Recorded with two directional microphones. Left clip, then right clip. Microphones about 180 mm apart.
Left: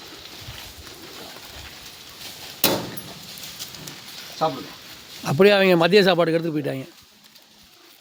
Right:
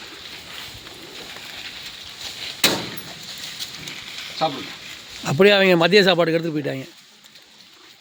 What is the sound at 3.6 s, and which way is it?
Horse, 50° left (ahead or behind).